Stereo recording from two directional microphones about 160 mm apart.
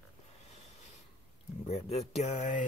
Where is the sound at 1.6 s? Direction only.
40° left (ahead or behind).